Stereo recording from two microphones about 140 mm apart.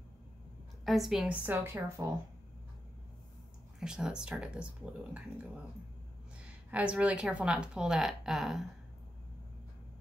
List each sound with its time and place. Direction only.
0.8 s speech: centre (ahead or behind)
1.4 s speech: 15° right (ahead or behind)
3.8 s speech: 5° right (ahead or behind)
6.7 s speech: 10° right (ahead or behind)